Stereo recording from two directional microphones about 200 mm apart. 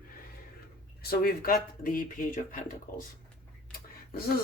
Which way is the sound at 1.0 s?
50° left (ahead or behind).